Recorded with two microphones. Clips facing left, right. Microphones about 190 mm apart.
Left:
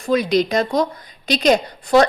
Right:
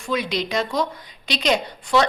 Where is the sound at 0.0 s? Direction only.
40° left (ahead or behind).